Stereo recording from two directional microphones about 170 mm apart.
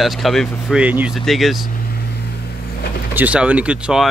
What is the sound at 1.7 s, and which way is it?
Vehicle, 60° left (ahead or behind).